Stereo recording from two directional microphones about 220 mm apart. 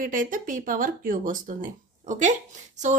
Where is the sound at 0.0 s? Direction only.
35° right (ahead or behind).